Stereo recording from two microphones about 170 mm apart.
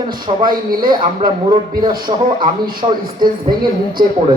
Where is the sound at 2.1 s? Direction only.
35° right (ahead or behind).